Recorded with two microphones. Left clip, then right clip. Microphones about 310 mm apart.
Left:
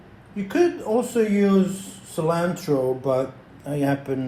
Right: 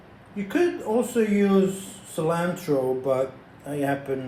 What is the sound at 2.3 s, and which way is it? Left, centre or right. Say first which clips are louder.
Speech: left 2 dB; centre.